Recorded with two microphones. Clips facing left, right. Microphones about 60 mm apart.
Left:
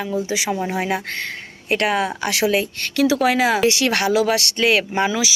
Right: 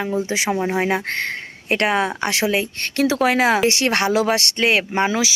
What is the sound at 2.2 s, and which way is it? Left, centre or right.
A woman's voice, right.